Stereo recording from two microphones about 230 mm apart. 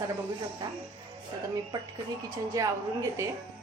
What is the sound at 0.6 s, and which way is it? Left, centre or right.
Speech, centre.